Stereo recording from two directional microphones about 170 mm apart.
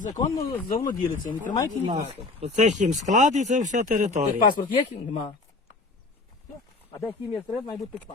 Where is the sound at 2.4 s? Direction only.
45° right (ahead or behind).